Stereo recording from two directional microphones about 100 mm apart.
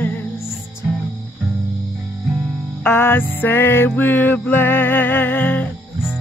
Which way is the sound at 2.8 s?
20° left (ahead or behind).